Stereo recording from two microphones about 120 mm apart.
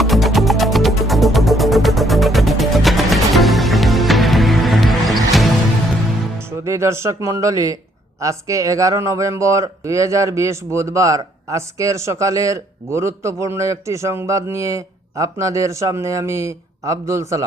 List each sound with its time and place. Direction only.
0.0 s music: centre (ahead or behind)
6.7 s speech: 25° right (ahead or behind)